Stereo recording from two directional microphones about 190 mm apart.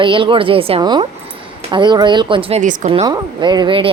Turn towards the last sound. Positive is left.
turn(degrees=-25)  # may be behind; listen again after turning